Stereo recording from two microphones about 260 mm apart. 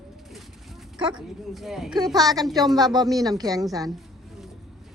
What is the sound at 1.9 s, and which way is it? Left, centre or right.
A woman's voice, centre.